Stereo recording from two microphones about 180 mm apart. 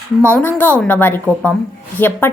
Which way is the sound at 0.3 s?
10° left (ahead or behind).